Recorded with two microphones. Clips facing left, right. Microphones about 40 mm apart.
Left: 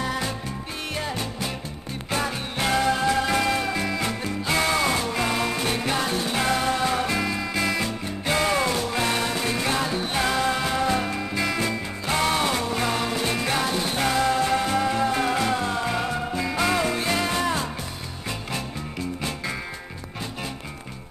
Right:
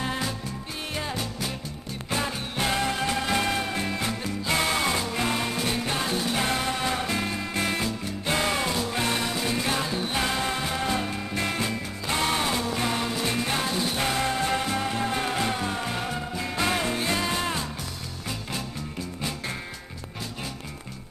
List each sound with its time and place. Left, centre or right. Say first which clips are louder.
2.0 s music: left 2 dB; left
2.7 s music: left 6 dB; left
4.0 s music: left 2 dB; left
5.6 s music: left 2 dB; left
6.3 s music: left 3 dB; left
8.3 s music: left 3 dB; left
11.3 s music: left 2 dB; left
11.7 s music: left 3 dB; left
14.0 s music: left 6 dB; left